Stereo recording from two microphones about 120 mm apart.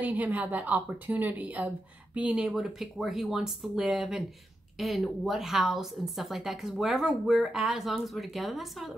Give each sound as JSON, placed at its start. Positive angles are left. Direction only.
{"t": 0.0, "sound": "a woman's voice", "side_deg": -15}